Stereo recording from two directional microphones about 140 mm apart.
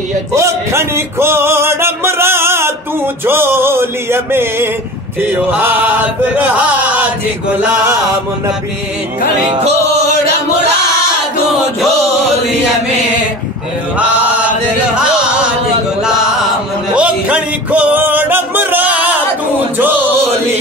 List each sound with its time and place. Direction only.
0.3 s music: 20° right (ahead or behind)
9.5 s music: 50° right (ahead or behind)
16.9 s music: 10° right (ahead or behind)